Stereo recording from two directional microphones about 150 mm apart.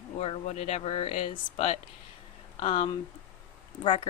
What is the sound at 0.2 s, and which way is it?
Speech, 45° left (ahead or behind).